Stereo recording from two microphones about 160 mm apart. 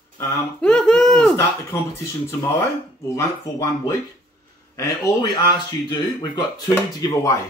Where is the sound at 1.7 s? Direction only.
15° left (ahead or behind).